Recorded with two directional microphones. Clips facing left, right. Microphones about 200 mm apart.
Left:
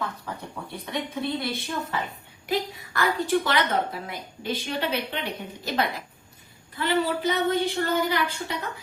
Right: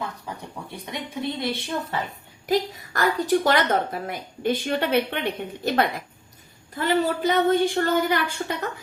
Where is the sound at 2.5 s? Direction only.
40° right (ahead or behind).